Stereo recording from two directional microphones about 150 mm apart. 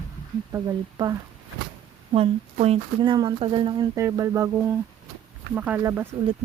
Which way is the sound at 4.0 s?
20° right (ahead or behind).